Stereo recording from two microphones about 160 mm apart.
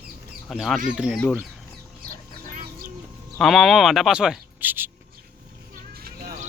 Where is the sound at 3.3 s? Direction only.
Centre (ahead or behind).